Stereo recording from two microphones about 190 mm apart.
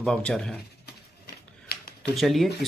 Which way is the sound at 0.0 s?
5° left (ahead or behind).